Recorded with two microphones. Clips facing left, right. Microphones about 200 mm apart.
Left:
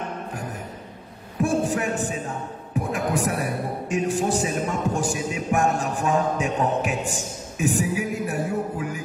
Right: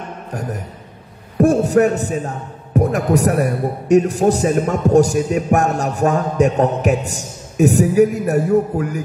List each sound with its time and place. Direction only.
0.3 s music: 40° right (ahead or behind)
1.4 s a man's voice: 40° right (ahead or behind)